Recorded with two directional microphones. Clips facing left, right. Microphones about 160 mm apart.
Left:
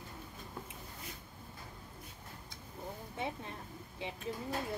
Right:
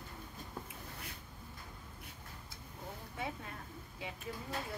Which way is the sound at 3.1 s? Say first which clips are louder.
Left 2 dB; 25° left (ahead or behind).